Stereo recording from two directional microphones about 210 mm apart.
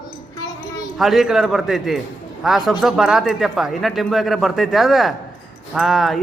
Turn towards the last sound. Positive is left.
turn(degrees=0)  # may be behind; listen again after turning